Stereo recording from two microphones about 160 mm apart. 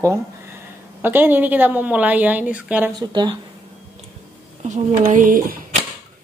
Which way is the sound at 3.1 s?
30° right (ahead or behind).